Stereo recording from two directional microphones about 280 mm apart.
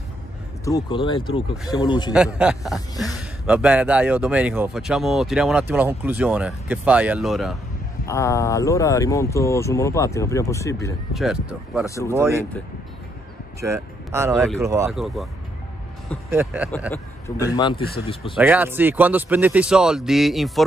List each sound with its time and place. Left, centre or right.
0.7 s speech: centre
2.1 s a man's voice: centre
8.0 s speech: centre
11.1 s a man's voice: centre
11.8 s speech: centre
12.2 s speech: centre
13.6 s a man's voice: centre
16.3 s speech: centre
16.9 s speech: centre
18.3 s a man's voice: centre